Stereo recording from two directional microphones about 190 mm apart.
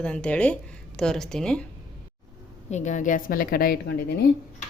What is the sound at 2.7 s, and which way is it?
A woman's voice, 40° left (ahead or behind).